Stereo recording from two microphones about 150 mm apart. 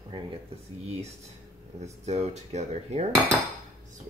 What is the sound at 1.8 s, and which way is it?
Dishes, 45° right (ahead or behind).